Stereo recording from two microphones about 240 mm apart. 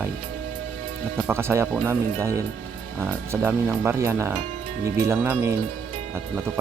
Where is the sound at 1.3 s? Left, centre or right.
Centre.